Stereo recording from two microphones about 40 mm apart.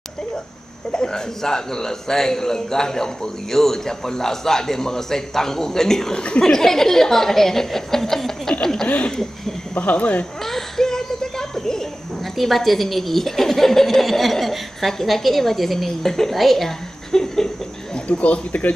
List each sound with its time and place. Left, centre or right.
0.9 s a man's voice: centre
6.1 s speech: left
6.4 s a man's voice: centre
9.8 s speech: left
10.4 s a sound: centre
12.4 s speech: centre
17.9 s speech: left